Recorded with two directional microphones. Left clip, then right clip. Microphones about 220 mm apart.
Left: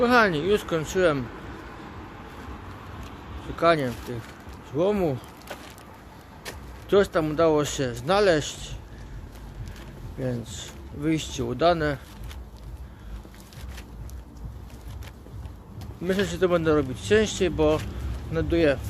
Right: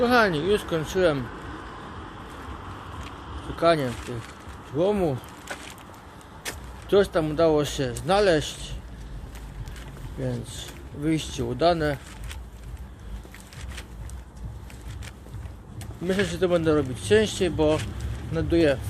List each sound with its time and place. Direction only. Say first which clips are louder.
0.0 s speech: left 1 dB; centre (ahead or behind)
3.5 s speech: even; centre (ahead or behind)
6.5 s a sound: right 4 dB; 20° left (ahead or behind)
6.8 s speech: even; centre (ahead or behind)
10.2 s speech: left 1 dB; centre (ahead or behind)
16.0 s speech: even; centre (ahead or behind)